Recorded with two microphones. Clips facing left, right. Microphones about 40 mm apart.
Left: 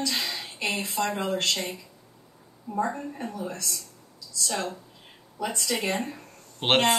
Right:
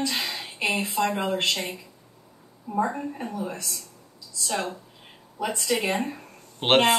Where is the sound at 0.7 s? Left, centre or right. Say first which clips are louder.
Right 3 dB; centre.